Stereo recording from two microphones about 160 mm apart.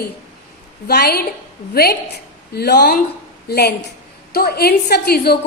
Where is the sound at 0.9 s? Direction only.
85° left.